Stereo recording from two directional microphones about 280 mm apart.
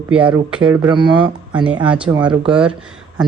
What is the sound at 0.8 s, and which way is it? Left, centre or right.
Speech, centre.